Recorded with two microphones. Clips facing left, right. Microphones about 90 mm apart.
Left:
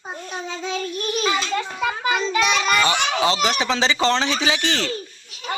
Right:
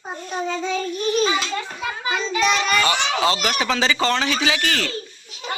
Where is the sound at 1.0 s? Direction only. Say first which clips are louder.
Right 3 dB; 60° left (ahead or behind).